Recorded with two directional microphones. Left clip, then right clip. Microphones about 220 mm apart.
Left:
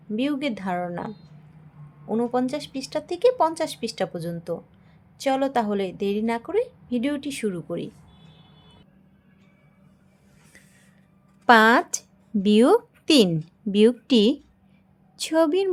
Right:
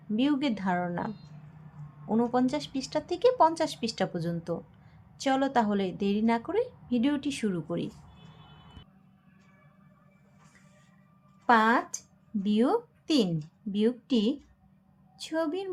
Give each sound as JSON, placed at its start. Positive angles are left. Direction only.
{"t": 0.2, "sound": "a woman's voice", "side_deg": 5}
{"t": 11.4, "sound": "a woman's voice", "side_deg": 50}